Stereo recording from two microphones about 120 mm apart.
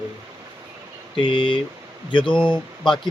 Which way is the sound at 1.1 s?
45° left (ahead or behind).